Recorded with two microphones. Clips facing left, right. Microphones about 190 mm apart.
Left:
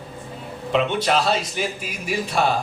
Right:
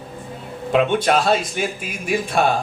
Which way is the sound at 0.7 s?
50° right (ahead or behind).